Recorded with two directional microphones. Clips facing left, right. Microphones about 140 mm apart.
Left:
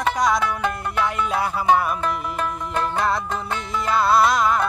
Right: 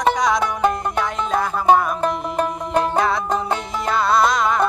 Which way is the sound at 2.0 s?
40° right (ahead or behind).